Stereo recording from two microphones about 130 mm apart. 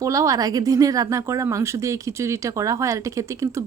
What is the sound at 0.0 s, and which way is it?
Speech, 25° right (ahead or behind).